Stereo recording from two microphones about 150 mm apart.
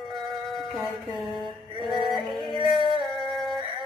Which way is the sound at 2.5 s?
30° left (ahead or behind).